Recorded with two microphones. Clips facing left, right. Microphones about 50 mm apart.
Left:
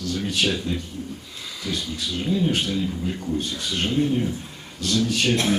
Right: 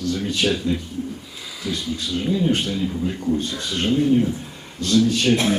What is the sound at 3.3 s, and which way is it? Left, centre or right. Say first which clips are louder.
A man's voice: right 2 dB; right.